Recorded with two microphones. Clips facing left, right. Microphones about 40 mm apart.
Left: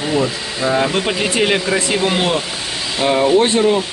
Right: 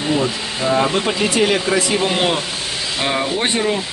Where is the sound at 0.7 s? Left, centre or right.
Centre.